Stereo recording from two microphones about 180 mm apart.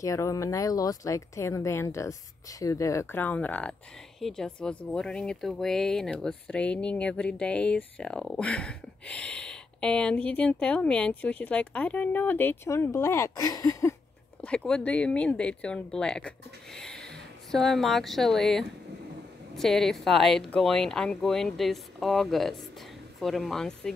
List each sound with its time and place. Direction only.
0.0 s speech: 20° left (ahead or behind)
14.4 s speech: 5° left (ahead or behind)